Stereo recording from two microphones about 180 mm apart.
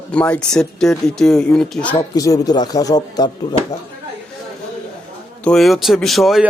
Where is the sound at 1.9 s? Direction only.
20° left (ahead or behind).